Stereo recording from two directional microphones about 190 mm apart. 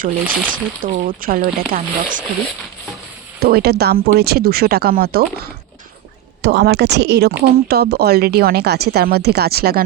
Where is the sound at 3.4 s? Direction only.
55° right (ahead or behind).